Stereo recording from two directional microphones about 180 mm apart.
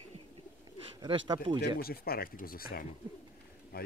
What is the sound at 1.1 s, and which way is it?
Speech, 30° right (ahead or behind).